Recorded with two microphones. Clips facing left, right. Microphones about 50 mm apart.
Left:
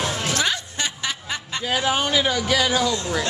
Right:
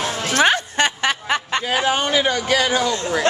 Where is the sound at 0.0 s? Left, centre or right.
Right.